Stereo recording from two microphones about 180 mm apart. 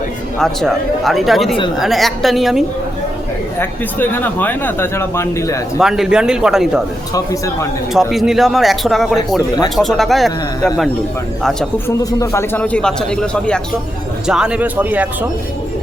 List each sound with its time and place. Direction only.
0.3 s speech: centre (ahead or behind)
3.6 s speech: 10° left (ahead or behind)
5.8 s speech: 5° right (ahead or behind)
7.1 s speech: 20° left (ahead or behind)
7.9 s speech: centre (ahead or behind)
11.9 s speech: 15° left (ahead or behind); by 15.3 s 10° right (ahead or behind)